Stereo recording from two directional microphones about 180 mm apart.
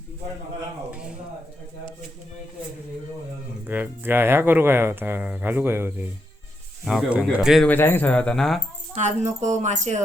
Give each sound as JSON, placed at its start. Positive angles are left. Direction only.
{"t": 0.9, "sound": "speech", "side_deg": -5}
{"t": 3.7, "sound": "speech", "side_deg": -10}
{"t": 7.7, "sound": "speech", "side_deg": 10}
{"t": 9.0, "sound": "speech", "side_deg": -40}